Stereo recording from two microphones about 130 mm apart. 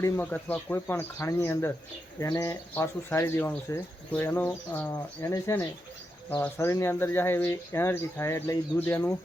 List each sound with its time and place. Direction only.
0.0 s speech: 15° left (ahead or behind)